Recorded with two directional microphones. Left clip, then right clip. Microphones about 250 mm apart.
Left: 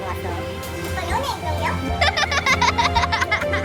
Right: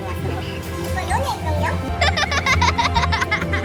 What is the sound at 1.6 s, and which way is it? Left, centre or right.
Music, centre.